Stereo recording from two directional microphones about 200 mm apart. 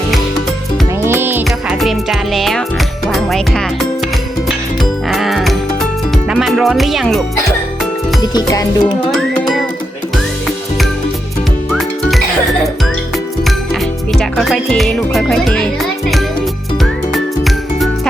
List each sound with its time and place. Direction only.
1.0 s music: 10° right (ahead or behind)
8.2 s music: 20° left (ahead or behind)
9.1 s music: centre (ahead or behind)
11.7 s music: centre (ahead or behind)
14.1 s music: centre (ahead or behind)